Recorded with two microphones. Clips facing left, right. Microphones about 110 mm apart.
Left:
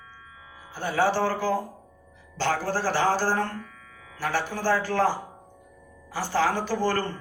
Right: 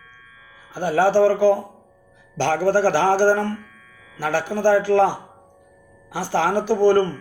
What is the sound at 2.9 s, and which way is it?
Speech, 65° right (ahead or behind).